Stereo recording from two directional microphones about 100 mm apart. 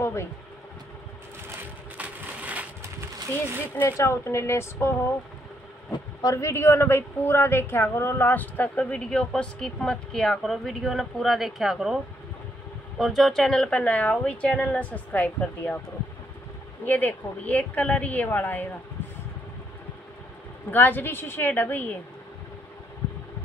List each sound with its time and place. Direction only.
0.0 s a sound: 25° left (ahead or behind)
2.0 s crushing: 15° right (ahead or behind)
3.7 s speech: 25° left (ahead or behind)
6.2 s a woman's voice: 30° left (ahead or behind); by 12.0 s 5° right (ahead or behind)
13.0 s a woman's voice: centre (ahead or behind); by 15.8 s 15° left (ahead or behind)
16.8 s a woman's voice: 20° left (ahead or behind)
20.7 s speech: 20° left (ahead or behind)